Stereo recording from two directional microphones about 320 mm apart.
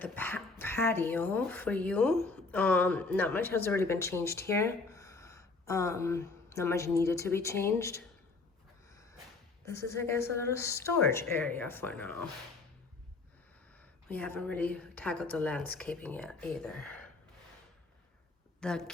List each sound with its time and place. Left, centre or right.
0.0 s speech: centre
8.9 s a sound: centre
9.6 s speech: centre
13.7 s a woman's voice: centre
18.6 s a woman's voice: centre